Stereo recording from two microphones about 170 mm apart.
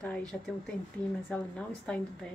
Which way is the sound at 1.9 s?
10° left (ahead or behind).